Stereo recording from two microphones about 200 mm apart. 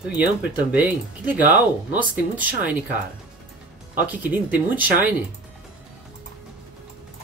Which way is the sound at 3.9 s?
10° right (ahead or behind).